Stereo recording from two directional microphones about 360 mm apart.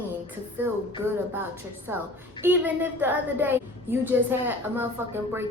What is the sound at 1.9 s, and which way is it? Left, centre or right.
A woman's voice, centre.